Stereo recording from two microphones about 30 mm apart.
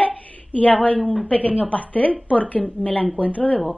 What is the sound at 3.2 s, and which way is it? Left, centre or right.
Speech, left.